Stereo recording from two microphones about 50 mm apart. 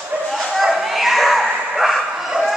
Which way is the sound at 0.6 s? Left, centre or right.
Centre.